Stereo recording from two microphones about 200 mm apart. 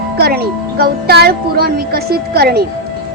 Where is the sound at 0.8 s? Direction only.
50° right (ahead or behind).